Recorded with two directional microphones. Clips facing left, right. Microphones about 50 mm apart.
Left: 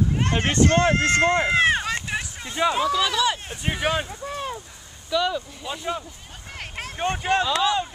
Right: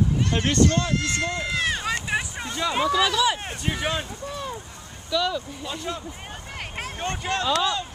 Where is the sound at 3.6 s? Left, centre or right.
Centre.